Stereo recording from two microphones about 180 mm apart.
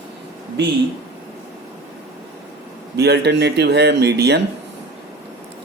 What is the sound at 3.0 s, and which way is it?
Speech, 70° right (ahead or behind).